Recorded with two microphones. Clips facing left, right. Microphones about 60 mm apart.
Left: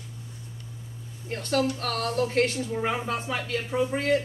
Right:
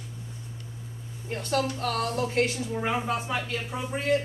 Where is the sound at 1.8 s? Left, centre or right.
Centre.